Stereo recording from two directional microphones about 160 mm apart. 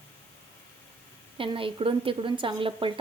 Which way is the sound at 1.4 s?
35° right (ahead or behind).